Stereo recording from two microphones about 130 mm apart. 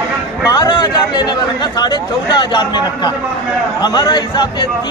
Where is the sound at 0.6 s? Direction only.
35° left (ahead or behind).